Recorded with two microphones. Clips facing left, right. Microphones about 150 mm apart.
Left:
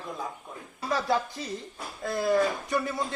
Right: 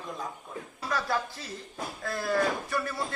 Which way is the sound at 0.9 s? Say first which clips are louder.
Left 3 dB; 25° left (ahead or behind).